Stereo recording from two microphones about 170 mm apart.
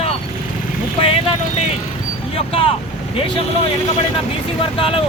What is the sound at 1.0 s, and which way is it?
Speech, 35° left (ahead or behind).